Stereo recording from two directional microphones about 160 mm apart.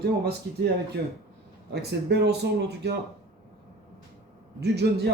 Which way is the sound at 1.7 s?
90° right.